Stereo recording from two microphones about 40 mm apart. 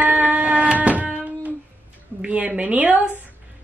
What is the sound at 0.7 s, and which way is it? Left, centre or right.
Carnatic music, right.